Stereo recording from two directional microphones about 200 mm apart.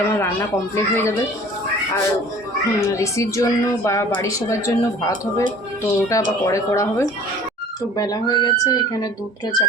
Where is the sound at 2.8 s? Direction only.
15° left (ahead or behind).